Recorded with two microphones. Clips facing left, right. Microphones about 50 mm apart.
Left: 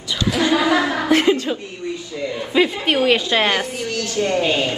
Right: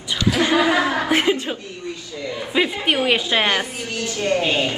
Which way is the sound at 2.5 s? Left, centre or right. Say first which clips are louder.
Left 2 dB; centre.